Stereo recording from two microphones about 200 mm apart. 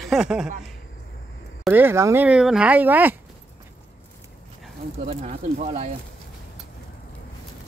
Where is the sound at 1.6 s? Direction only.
10° right (ahead or behind).